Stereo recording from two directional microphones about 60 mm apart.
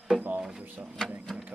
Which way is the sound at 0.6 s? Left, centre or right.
Right.